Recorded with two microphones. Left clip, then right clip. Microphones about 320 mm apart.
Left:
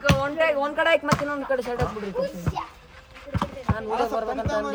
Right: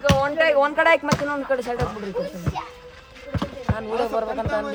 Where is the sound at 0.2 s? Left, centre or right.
Right.